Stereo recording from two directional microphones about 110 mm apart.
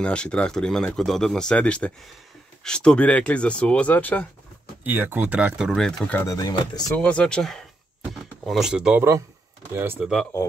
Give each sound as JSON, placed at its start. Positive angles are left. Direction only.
{"t": 0.0, "sound": "speech", "side_deg": 10}
{"t": 4.8, "sound": "speech", "side_deg": -20}
{"t": 5.7, "sound": "speech", "side_deg": 5}
{"t": 6.2, "sound": "speech", "side_deg": 35}
{"t": 7.0, "sound": "speech", "side_deg": 10}